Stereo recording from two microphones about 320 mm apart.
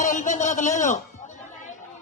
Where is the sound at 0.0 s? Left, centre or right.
Left.